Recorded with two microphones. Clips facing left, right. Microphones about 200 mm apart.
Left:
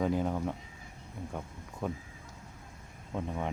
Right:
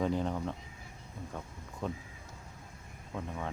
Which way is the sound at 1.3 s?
15° left (ahead or behind).